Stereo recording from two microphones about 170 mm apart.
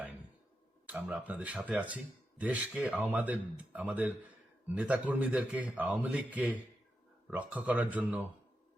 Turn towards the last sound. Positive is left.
turn(degrees=-10)  # may be behind; listen again after turning